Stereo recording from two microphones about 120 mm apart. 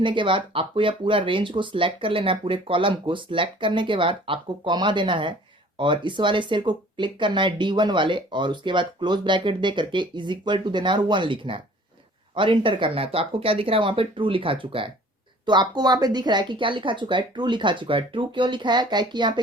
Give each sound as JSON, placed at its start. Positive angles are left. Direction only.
{"t": 0.0, "sound": "speech", "side_deg": -45}
{"t": 15.4, "sound": "speech", "side_deg": -35}